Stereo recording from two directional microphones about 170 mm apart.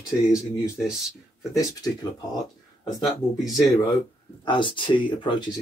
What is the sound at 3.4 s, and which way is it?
Speech, 25° left (ahead or behind).